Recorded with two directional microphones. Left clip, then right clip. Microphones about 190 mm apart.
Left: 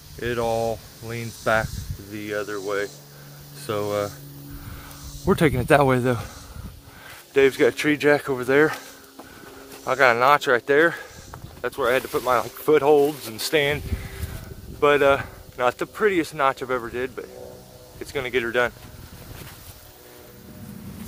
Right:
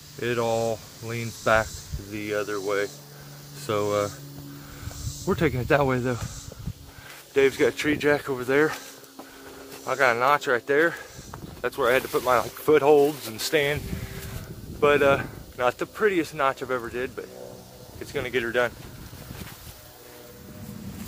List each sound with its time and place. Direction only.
0.2 s speech: centre (ahead or behind)
5.2 s speech: 40° left (ahead or behind)
7.3 s speech: 30° left (ahead or behind)
9.8 s speech: 40° left (ahead or behind)
11.3 s speech: 5° left (ahead or behind); by 18.7 s 35° left (ahead or behind)